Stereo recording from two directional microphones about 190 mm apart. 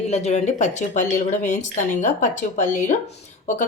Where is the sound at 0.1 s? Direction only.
35° left (ahead or behind).